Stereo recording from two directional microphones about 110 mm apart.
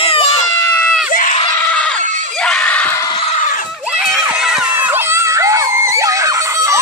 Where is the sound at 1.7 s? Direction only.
10° left (ahead or behind).